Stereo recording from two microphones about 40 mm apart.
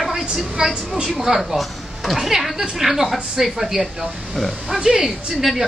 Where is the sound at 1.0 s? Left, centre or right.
Centre.